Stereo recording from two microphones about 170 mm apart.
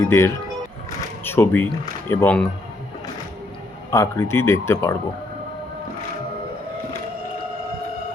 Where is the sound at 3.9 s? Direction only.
15° left (ahead or behind).